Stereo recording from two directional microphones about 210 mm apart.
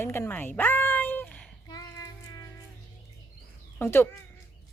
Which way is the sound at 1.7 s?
15° left (ahead or behind).